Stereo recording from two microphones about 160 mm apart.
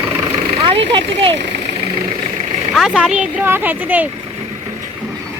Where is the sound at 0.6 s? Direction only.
35° right (ahead or behind).